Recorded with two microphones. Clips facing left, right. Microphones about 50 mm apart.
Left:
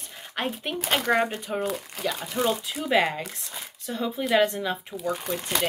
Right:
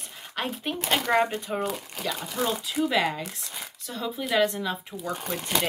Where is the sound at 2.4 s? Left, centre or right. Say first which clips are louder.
Even; left.